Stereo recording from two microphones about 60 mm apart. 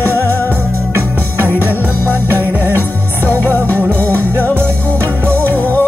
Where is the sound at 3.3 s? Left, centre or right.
Right.